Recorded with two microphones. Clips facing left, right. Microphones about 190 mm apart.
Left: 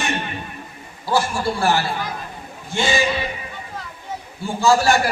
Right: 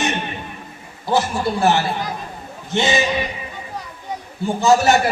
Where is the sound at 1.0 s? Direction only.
20° right (ahead or behind).